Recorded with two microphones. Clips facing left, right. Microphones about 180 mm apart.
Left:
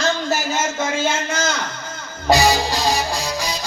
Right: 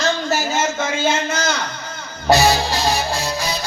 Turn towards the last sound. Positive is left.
turn(degrees=15)  # may be behind; listen again after turning